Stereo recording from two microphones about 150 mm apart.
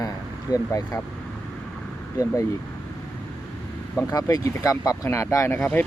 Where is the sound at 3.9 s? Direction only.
20° left (ahead or behind).